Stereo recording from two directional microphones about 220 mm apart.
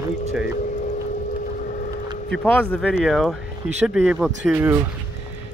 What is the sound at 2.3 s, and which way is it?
Speech, 5° left (ahead or behind).